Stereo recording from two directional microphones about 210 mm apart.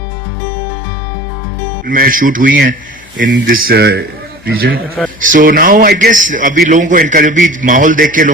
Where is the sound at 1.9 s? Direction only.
40° right (ahead or behind).